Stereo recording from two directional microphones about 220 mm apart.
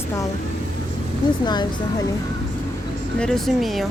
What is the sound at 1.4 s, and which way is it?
Speech, 20° left (ahead or behind).